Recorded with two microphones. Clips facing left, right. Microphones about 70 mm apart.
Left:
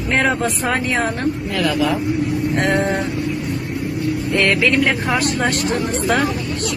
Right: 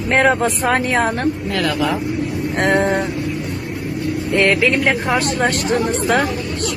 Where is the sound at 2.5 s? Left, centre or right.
Right.